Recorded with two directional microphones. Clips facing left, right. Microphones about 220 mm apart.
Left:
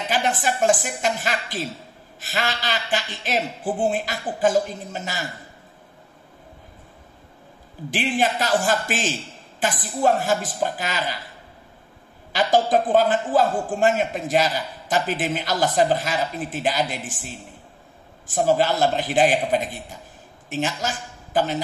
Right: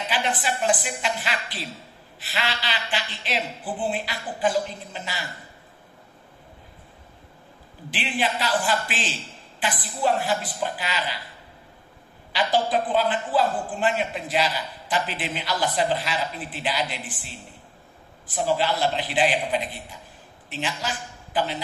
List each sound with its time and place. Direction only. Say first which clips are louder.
0.1 s a man's voice: left 4 dB; 45° left (ahead or behind)
7.9 s a man's voice: left 4 dB; 45° left (ahead or behind)
12.3 s a man's voice: left 4 dB; 45° left (ahead or behind)